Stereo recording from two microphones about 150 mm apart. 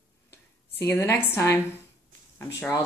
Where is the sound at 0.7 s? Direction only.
15° left (ahead or behind).